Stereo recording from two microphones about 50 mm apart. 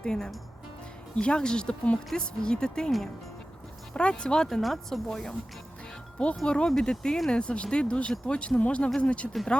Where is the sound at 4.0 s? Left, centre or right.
Centre.